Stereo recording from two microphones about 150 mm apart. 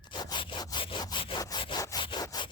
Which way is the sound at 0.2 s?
30° left (ahead or behind).